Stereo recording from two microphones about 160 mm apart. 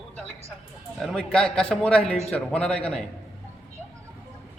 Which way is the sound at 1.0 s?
5° left (ahead or behind).